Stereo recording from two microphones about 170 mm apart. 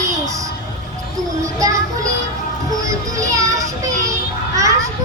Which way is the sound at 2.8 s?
20° right (ahead or behind).